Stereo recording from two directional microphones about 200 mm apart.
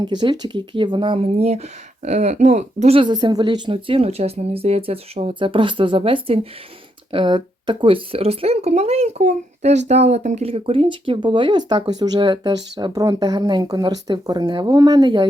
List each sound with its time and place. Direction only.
0.0 s speech: 20° right (ahead or behind)